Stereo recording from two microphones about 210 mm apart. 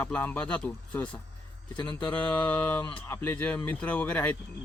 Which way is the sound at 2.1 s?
5° left (ahead or behind).